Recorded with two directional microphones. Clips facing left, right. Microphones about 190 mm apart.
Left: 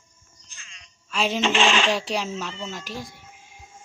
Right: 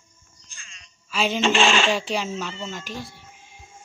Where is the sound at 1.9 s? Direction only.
Centre (ahead or behind).